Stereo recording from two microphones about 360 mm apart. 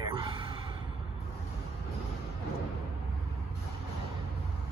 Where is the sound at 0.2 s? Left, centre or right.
Centre.